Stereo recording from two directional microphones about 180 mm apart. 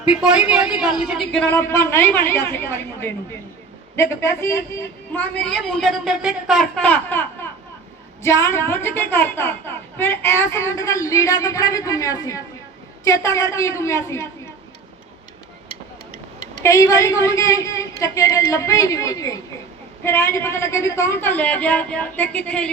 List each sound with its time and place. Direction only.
0.0 s a man's voice: 5° right (ahead or behind); by 14.3 s 15° left (ahead or behind)
16.6 s a woman's voice: 15° left (ahead or behind)